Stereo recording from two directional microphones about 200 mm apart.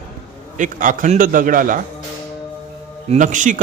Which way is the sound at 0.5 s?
40° right (ahead or behind).